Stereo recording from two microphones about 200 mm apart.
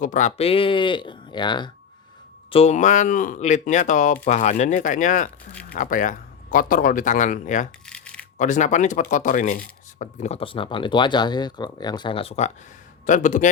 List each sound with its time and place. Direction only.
0.0 s speech: 40° left (ahead or behind)
7.9 s a sound: 5° left (ahead or behind)
8.4 s speech: 40° left (ahead or behind)